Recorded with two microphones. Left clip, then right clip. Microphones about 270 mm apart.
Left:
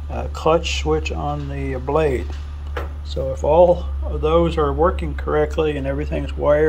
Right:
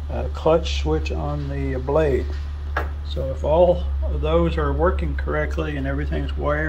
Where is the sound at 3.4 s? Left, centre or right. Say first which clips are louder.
Left 3 dB; centre.